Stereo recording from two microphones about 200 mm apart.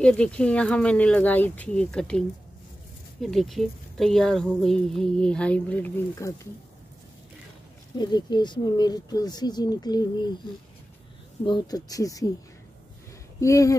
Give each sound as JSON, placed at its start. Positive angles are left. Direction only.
{"t": 0.0, "sound": "speech", "side_deg": 5}
{"t": 8.0, "sound": "speech", "side_deg": 20}
{"t": 11.4, "sound": "speech", "side_deg": 20}
{"t": 13.4, "sound": "speech", "side_deg": 15}